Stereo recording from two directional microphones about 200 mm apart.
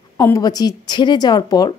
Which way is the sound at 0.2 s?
15° left (ahead or behind).